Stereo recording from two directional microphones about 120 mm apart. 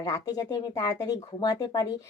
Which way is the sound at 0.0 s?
30° left (ahead or behind).